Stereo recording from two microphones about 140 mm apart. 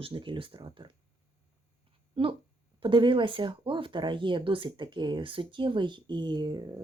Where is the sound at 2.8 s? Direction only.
35° right (ahead or behind).